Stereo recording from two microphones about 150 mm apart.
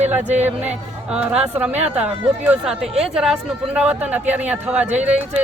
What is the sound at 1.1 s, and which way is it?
Speech, 5° right (ahead or behind).